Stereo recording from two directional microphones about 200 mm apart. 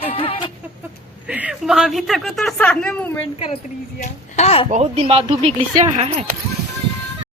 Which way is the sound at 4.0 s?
35° left (ahead or behind).